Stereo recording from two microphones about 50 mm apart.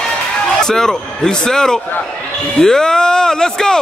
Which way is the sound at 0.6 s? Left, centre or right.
Centre.